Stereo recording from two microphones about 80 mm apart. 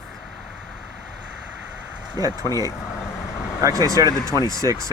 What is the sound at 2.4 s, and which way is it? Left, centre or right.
Speech, left.